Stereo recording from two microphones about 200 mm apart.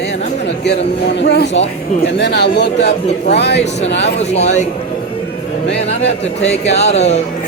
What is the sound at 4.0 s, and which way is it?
Speech, 35° left (ahead or behind).